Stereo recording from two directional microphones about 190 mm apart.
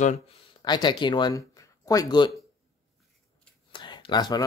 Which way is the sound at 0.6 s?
25° left (ahead or behind).